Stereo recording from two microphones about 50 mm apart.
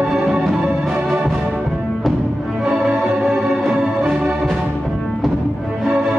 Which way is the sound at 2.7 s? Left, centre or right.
Centre.